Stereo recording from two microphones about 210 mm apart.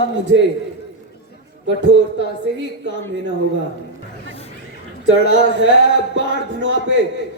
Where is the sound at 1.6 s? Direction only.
60° right (ahead or behind).